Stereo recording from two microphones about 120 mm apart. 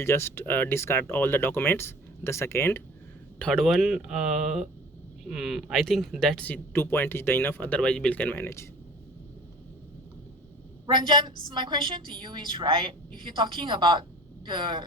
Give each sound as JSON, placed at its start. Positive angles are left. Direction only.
{"t": 0.0, "sound": "speech", "side_deg": 20}
{"t": 3.3, "sound": "speech", "side_deg": 5}
{"t": 10.8, "sound": "a woman's voice", "side_deg": -40}